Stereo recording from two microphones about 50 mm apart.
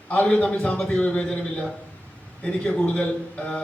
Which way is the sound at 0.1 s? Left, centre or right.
Left.